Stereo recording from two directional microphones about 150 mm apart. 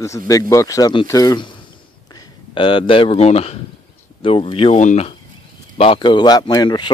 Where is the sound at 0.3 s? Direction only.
20° left (ahead or behind).